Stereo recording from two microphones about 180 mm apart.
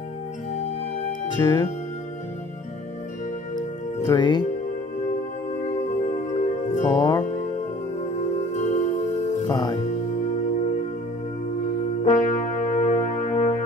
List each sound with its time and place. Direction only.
1.3 s music: 20° left (ahead or behind)
3.5 s music: 25° left (ahead or behind)
6.3 s music: 40° left (ahead or behind)
6.9 s music: 20° left (ahead or behind)
7.2 s music: 40° left (ahead or behind)
9.4 s speech: 20° left (ahead or behind)
12.0 s music: 40° left (ahead or behind)